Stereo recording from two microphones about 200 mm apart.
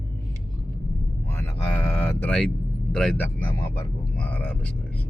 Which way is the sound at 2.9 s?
5° left (ahead or behind).